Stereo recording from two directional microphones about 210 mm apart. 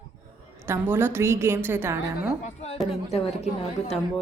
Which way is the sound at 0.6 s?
10° right (ahead or behind).